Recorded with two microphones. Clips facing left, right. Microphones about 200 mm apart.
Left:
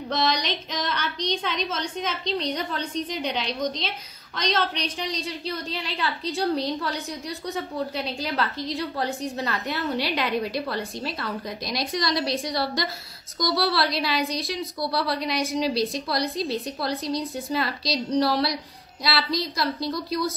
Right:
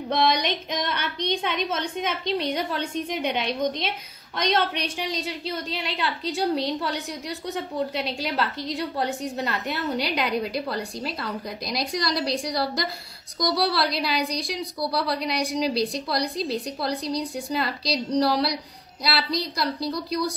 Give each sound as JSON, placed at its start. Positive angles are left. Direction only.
{"t": 0.1, "sound": "a woman's voice", "side_deg": -55}
{"t": 4.9, "sound": "a woman's voice", "side_deg": 0}